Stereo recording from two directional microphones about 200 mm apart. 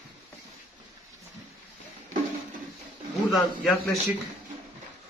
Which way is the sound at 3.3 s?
Centre (ahead or behind).